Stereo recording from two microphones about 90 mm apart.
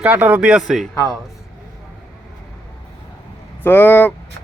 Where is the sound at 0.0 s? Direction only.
20° right (ahead or behind).